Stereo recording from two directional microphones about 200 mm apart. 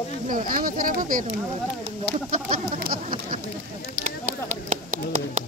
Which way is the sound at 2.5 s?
45° right (ahead or behind).